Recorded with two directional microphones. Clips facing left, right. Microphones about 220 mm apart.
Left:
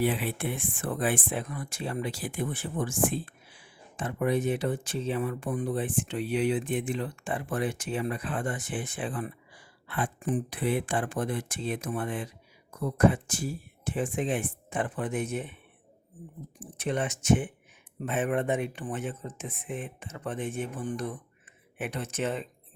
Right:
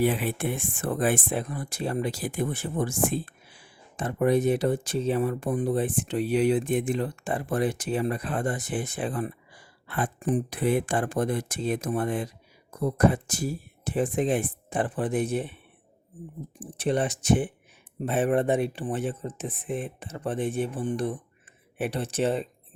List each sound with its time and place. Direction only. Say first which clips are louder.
0.0 s speech: right 3 dB; 45° right (ahead or behind)
16.6 s speech: right 5 dB; 30° right (ahead or behind)